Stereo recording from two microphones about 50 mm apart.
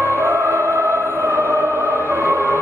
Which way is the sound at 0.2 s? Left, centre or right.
Right.